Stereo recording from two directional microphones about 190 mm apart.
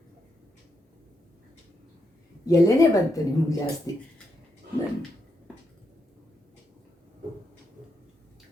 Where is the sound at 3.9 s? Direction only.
20° left (ahead or behind).